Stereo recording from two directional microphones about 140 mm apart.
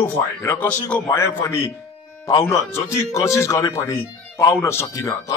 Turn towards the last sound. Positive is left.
turn(degrees=25)  # may be behind; listen again after turning